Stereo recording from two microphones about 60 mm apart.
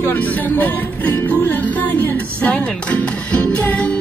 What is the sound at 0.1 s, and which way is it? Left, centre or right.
Speech, left.